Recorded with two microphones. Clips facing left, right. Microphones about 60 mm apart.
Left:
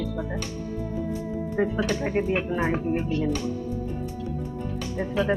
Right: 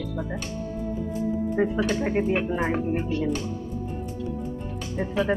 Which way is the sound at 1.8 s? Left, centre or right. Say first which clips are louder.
Right 1 dB; centre.